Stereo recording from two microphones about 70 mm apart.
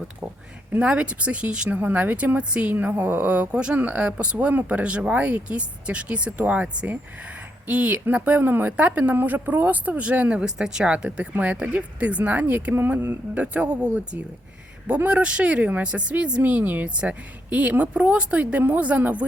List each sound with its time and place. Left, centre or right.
0.7 s speech: centre
1.8 s speech: right
2.7 s speech: right
8.7 s speech: centre